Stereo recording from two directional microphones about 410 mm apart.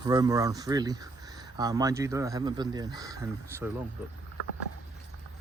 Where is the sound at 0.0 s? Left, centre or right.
Centre.